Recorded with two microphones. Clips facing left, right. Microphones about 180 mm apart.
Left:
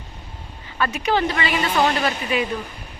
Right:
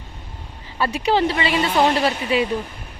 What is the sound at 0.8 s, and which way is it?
A woman's voice, 30° right (ahead or behind).